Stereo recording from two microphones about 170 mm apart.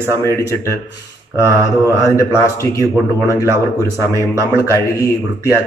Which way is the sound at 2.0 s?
20° left (ahead or behind).